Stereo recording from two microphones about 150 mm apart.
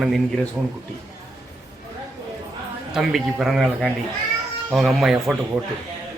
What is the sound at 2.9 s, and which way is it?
A man's voice, centre (ahead or behind).